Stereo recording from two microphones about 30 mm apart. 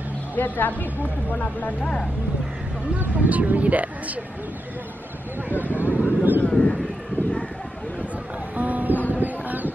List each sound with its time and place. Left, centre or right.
0.4 s speech: left
3.2 s speech: right
5.6 s vehicle: right
6.5 s a sound: left
8.5 s music: right
9.1 s a sound: right